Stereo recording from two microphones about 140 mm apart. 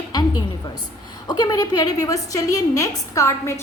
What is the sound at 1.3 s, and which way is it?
A woman's voice, 30° left (ahead or behind).